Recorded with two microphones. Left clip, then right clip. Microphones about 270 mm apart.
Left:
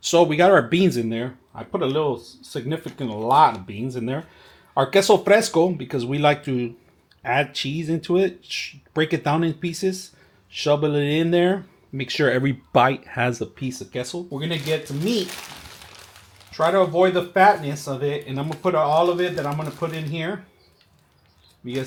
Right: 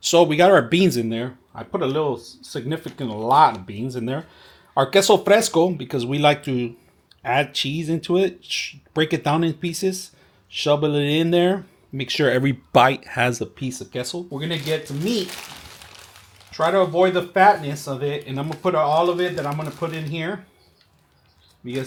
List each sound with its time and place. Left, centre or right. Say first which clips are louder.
0.0 s speech: right 1 dB; centre
1.9 s speech: even; right
2.1 s speech: even; centre
3.0 s speech: even; right
3.4 s speech: right 1 dB; centre
14.6 s crumpling: left 1 dB; centre
17.4 s speech: right 1 dB; centre
21.6 s speech: even; centre